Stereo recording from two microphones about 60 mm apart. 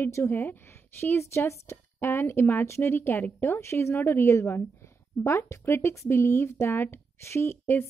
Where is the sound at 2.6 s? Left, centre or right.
Left.